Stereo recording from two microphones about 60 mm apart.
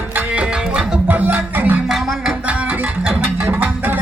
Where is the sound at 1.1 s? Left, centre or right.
Right.